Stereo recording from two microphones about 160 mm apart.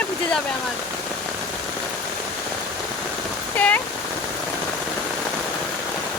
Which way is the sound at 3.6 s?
10° left (ahead or behind).